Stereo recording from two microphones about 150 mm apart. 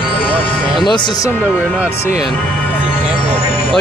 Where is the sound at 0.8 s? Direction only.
30° left (ahead or behind).